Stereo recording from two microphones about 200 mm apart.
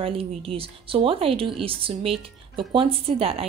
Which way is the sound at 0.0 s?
25° right (ahead or behind).